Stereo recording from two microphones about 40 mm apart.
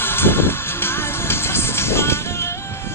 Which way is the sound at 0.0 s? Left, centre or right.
Left.